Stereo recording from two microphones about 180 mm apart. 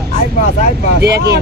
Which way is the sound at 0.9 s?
65° right (ahead or behind).